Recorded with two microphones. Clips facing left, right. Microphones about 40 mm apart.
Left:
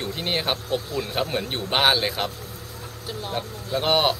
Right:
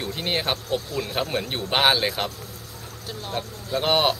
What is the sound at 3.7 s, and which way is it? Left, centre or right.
Speech, centre.